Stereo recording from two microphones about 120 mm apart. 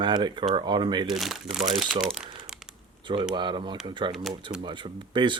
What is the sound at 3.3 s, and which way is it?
Speech, 40° right (ahead or behind).